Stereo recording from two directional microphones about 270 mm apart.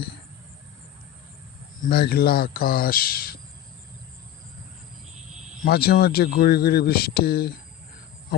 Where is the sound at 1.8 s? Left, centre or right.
Left.